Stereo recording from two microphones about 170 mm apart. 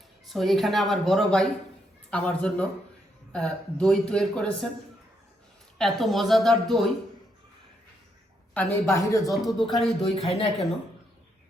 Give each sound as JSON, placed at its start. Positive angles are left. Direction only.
{"t": 0.3, "sound": "a man's voice", "side_deg": 0}
{"t": 5.7, "sound": "speech", "side_deg": 0}
{"t": 8.5, "sound": "a man's voice", "side_deg": 15}
{"t": 9.3, "sound": "speech", "side_deg": 0}
{"t": 10.2, "sound": "speech", "side_deg": 35}